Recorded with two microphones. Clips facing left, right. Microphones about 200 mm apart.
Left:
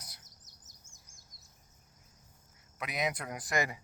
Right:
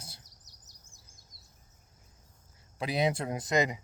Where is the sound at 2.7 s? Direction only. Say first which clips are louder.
Right 6 dB; 30° right (ahead or behind).